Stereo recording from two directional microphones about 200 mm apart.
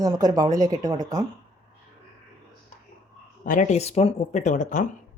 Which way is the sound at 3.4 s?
40° left (ahead or behind).